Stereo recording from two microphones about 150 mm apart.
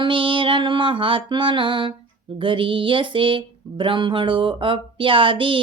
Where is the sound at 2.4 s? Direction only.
35° right (ahead or behind).